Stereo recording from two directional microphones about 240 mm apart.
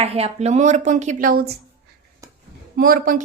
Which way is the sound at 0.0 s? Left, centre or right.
Right.